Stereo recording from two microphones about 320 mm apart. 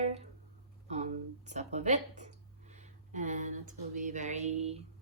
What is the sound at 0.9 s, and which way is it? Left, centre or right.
Speech, right.